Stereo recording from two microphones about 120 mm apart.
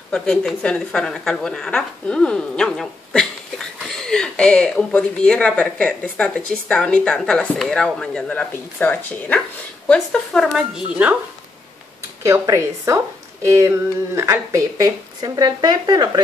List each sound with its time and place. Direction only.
0.1 s speech: 5° left (ahead or behind)
12.2 s speech: 25° right (ahead or behind)